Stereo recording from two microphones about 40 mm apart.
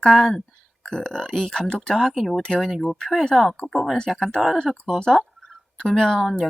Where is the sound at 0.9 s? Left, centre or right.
Left.